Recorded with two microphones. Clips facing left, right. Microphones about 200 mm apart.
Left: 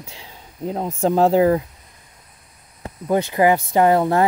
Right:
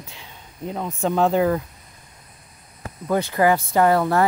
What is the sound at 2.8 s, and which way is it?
Speech, 20° left (ahead or behind).